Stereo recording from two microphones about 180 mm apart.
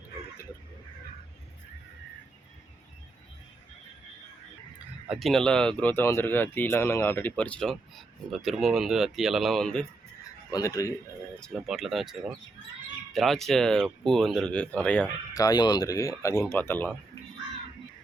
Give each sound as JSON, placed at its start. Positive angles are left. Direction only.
{"t": 5.0, "sound": "speech", "side_deg": 0}
{"t": 10.5, "sound": "speech", "side_deg": 20}
{"t": 11.3, "sound": "speech", "side_deg": 0}
{"t": 13.1, "sound": "speech", "side_deg": 0}
{"t": 15.3, "sound": "speech", "side_deg": 20}